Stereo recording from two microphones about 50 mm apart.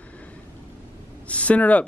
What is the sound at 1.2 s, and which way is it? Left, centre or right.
Speech, left.